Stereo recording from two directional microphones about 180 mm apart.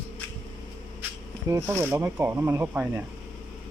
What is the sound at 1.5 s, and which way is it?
Speech, 15° right (ahead or behind).